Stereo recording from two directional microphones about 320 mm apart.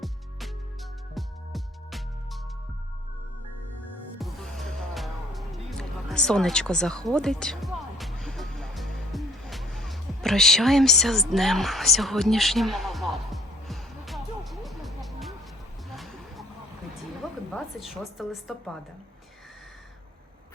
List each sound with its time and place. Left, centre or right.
0.0 s music: centre
4.2 s music: centre
17.5 s a woman's voice: centre